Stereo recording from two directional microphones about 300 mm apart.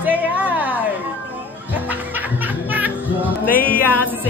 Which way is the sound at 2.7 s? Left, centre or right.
Centre.